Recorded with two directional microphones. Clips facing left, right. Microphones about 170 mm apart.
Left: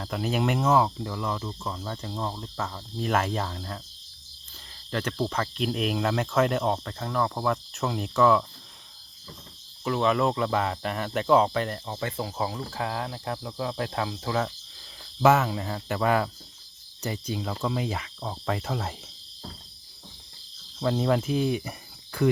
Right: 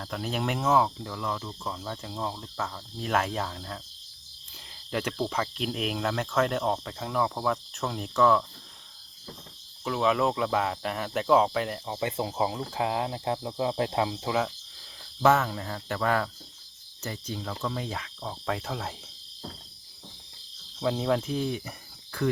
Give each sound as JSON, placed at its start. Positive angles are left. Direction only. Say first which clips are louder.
{"t": 0.0, "sound": "speech", "louder": "left 4 dB", "side_deg": 5}
{"t": 4.9, "sound": "speech", "louder": "left 1 dB", "side_deg": -10}
{"t": 9.8, "sound": "speech", "louder": "left 1 dB", "side_deg": 0}
{"t": 11.9, "sound": "speech", "louder": "right 3 dB", "side_deg": -20}
{"t": 14.3, "sound": "speech", "louder": "even", "side_deg": 0}
{"t": 17.0, "sound": "cricket", "louder": "left 4 dB", "side_deg": 15}
{"t": 17.6, "sound": "speech", "louder": "left 4 dB", "side_deg": 10}
{"t": 20.7, "sound": "cricket", "louder": "left 2 dB", "side_deg": 0}